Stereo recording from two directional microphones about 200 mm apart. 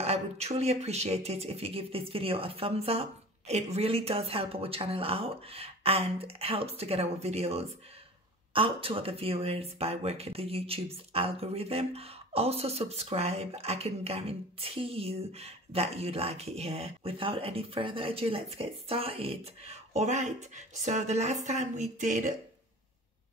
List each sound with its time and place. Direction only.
0.0 s speech: 30° right (ahead or behind)